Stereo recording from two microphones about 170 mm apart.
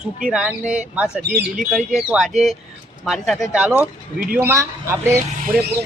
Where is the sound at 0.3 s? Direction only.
5° right (ahead or behind).